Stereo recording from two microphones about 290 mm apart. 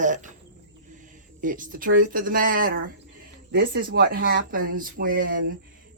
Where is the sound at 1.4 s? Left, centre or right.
Right.